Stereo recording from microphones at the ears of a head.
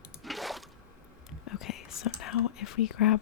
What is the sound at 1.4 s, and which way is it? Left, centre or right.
Whispering, left.